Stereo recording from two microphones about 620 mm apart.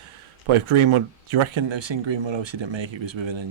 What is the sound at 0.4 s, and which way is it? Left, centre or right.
Speech, right.